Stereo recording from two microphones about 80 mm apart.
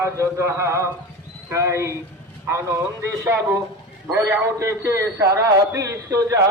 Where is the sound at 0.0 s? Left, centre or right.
Right.